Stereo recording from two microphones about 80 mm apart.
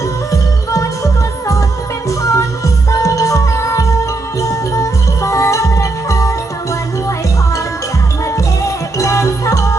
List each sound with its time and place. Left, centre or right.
0.3 s music: left
2.0 s music: left
9.0 s music: left